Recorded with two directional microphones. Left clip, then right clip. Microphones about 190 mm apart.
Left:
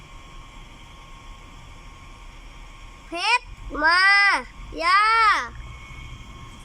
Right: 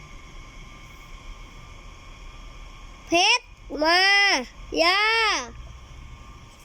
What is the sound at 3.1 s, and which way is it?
A child's voice, 15° right (ahead or behind).